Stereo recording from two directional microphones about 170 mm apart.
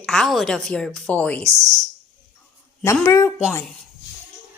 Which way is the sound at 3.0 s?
15° left (ahead or behind).